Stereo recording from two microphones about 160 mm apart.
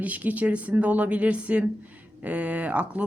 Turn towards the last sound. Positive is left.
turn(degrees=-10)  # may be behind; listen again after turning